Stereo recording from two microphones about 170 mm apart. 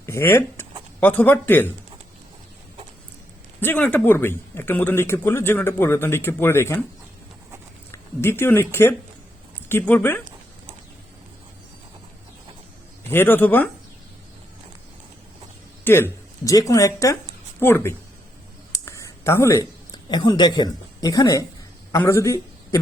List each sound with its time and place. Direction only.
0.0 s a sound: 15° left (ahead or behind)
0.9 s speech: 10° left (ahead or behind)
3.6 s speech: 10° left (ahead or behind)
7.9 s speech: 15° left (ahead or behind)
13.1 s speech: 10° left (ahead or behind)
15.8 s speech: 15° left (ahead or behind)
18.7 s a sound: 15° left (ahead or behind)
20.1 s a woman's voice: 25° left (ahead or behind)